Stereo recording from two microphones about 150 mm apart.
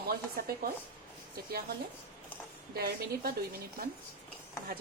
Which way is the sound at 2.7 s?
90° right.